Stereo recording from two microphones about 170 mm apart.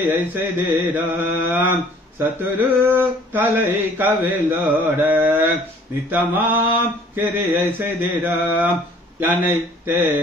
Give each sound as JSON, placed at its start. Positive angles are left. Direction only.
{"t": 0.0, "sound": "mantra", "side_deg": -15}